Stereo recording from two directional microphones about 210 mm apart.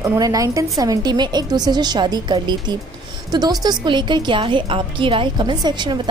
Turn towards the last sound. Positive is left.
turn(degrees=-20)  # may be behind; listen again after turning